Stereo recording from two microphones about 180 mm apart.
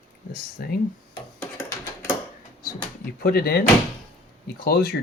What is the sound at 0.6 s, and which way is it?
Speech, 60° left (ahead or behind).